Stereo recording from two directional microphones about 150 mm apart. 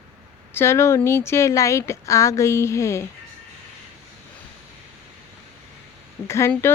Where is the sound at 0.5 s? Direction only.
15° left (ahead or behind).